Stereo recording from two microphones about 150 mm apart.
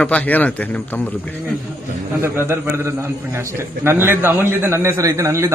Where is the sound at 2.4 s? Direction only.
15° right (ahead or behind).